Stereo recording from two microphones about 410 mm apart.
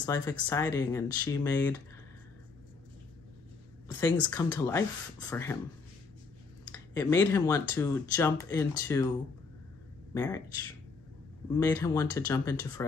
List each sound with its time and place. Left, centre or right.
0.0 s speech: centre
4.3 s speech: centre
6.7 s speech: centre
10.1 s speech: centre
11.5 s speech: centre